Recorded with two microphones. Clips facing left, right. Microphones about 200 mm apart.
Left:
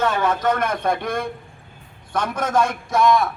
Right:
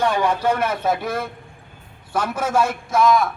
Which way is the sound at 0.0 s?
15° right (ahead or behind).